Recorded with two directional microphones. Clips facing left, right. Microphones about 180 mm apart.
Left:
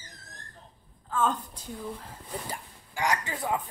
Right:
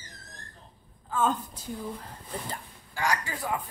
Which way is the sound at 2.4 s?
10° left (ahead or behind).